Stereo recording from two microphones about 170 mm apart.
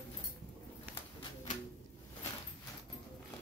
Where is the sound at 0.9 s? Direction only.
10° right (ahead or behind).